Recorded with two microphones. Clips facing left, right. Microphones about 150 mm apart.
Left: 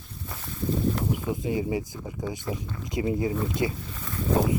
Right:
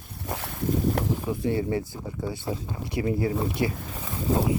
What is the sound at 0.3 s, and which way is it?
Boat, 70° right (ahead or behind).